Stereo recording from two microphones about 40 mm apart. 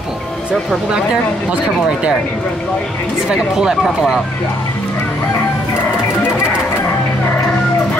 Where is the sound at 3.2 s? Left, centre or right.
Centre.